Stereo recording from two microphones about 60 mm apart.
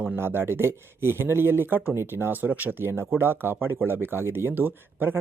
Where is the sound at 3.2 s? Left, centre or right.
Right.